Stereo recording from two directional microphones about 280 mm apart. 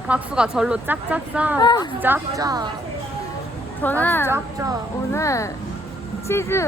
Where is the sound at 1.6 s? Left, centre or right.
Centre.